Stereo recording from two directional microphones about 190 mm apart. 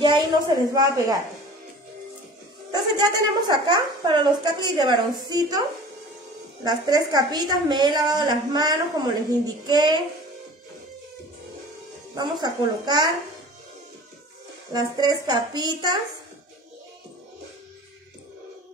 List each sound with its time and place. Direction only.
0.0 s a woman's voice: 20° right (ahead or behind)
2.7 s a woman's voice: 20° right (ahead or behind)
6.6 s a woman's voice: 20° right (ahead or behind)
12.2 s a woman's voice: 20° right (ahead or behind)
14.7 s a woman's voice: 20° right (ahead or behind)